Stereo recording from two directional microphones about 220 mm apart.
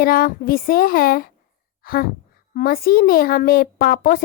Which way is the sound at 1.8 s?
40° left (ahead or behind).